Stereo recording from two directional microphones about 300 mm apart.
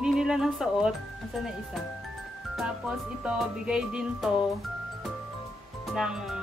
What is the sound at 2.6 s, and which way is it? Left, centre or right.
Speech, centre.